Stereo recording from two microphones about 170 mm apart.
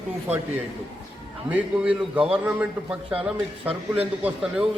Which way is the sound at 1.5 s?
5° right (ahead or behind).